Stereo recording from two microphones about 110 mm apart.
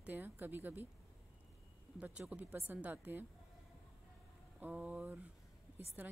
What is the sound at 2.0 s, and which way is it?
Speech, 10° right (ahead or behind).